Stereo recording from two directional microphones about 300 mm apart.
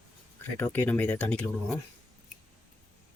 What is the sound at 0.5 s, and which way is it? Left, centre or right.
Speech, centre.